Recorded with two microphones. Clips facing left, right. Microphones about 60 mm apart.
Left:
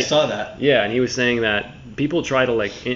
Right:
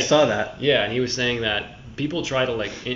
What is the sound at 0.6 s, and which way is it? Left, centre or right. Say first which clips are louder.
Speech: left 6 dB; centre.